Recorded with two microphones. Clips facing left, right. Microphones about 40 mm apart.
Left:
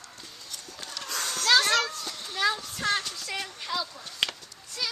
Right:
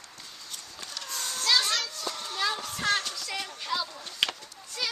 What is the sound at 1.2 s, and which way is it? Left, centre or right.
Children playing, left.